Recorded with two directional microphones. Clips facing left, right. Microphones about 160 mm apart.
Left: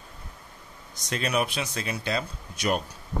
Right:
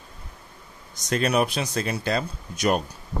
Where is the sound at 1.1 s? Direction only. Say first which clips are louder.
Right 5 dB; 40° right (ahead or behind).